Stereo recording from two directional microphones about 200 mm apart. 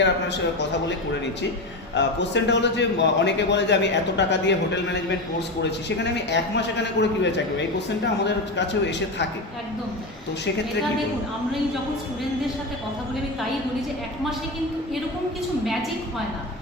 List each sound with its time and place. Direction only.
2.0 s a man's voice: 60° left (ahead or behind)
6.3 s a man's voice: 60° left (ahead or behind)